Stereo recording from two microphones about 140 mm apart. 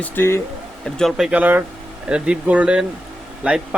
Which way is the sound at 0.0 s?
20° left (ahead or behind).